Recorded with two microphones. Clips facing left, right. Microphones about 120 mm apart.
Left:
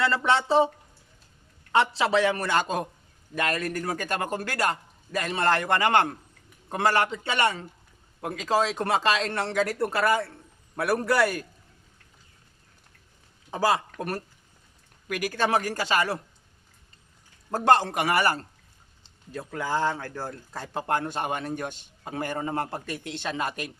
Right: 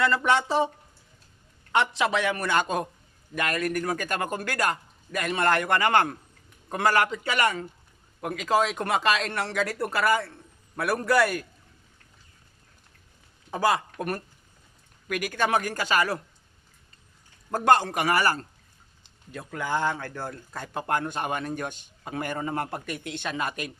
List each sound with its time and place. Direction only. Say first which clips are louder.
0.0 s speech: right 1 dB; 30° left (ahead or behind)
1.7 s speech: left 2 dB; 30° left (ahead or behind)
13.6 s speech: even; 30° left (ahead or behind)
17.5 s speech: even; 30° left (ahead or behind)